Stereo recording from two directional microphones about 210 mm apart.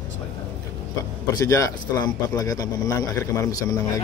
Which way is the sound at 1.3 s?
15° left (ahead or behind).